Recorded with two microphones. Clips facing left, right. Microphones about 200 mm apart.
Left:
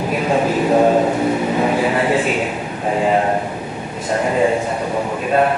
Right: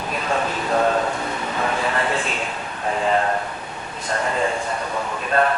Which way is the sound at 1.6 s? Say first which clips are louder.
Left 3 dB; 15° left (ahead or behind).